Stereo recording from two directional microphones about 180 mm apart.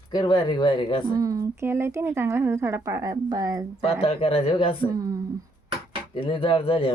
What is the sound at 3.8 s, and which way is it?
Speech, 30° left (ahead or behind).